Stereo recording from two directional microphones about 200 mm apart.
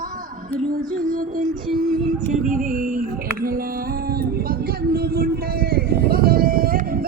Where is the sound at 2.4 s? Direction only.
40° right (ahead or behind).